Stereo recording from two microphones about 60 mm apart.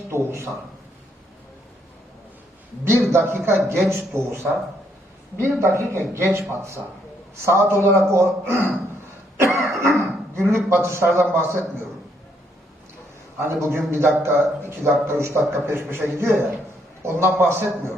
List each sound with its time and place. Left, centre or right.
0.1 s a man's voice: right
2.8 s a man's voice: right
3.5 s a man's voice: centre
3.8 s a man's voice: right
6.5 s a man's voice: right
7.4 s a man's voice: right
9.6 s dog: right
10.7 s a man's voice: right
13.6 s a man's voice: right
17.0 s a man's voice: right